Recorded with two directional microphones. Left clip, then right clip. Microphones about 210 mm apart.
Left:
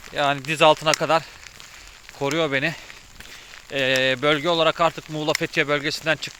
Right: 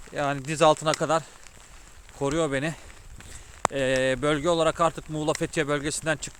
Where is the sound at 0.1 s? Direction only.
15° right (ahead or behind).